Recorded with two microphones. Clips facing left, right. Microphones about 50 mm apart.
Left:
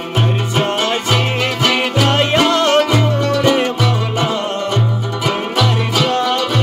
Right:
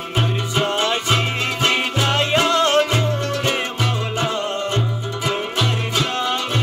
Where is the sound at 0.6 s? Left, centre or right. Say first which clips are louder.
Left 2 dB; left.